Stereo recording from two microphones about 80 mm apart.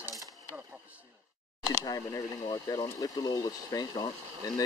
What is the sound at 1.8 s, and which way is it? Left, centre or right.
Speech, left.